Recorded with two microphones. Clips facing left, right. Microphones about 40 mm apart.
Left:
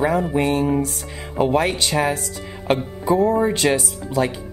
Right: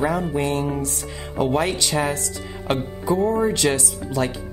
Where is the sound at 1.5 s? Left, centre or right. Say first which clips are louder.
Left 2 dB; centre.